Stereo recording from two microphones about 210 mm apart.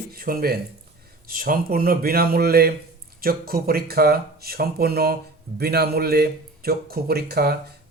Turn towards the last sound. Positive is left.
turn(degrees=-50)  # may be behind; listen again after turning